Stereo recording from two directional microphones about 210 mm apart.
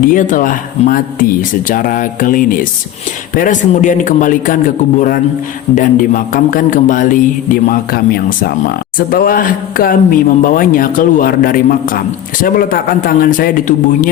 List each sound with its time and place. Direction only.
0.0 s speech: 40° left (ahead or behind)